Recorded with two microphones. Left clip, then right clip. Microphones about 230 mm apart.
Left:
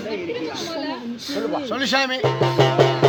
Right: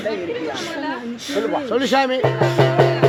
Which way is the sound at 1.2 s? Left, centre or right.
Centre.